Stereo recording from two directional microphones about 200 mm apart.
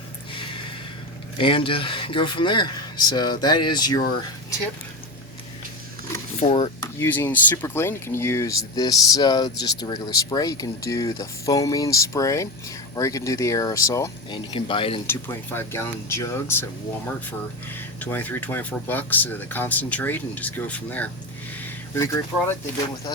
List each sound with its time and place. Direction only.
1.4 s speech: 25° left (ahead or behind)
6.4 s speech: 30° left (ahead or behind)
7.0 s speech: 10° left (ahead or behind); by 15.0 s 25° left (ahead or behind)
15.0 s speech: 10° left (ahead or behind)
18.0 s speech: 10° left (ahead or behind)